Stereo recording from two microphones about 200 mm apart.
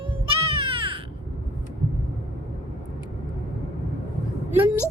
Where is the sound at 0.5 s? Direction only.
25° right (ahead or behind).